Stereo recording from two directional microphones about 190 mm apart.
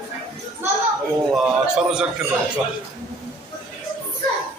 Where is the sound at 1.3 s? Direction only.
5° right (ahead or behind).